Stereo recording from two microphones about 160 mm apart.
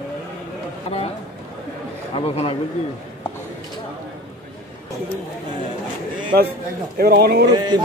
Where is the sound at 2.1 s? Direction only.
35° left (ahead or behind).